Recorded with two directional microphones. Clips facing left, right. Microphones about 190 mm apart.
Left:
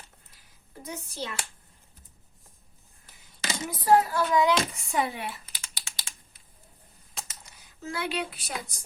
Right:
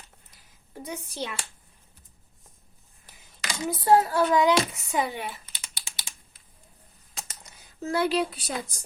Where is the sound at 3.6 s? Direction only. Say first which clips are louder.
Right 1 dB; 25° right (ahead or behind).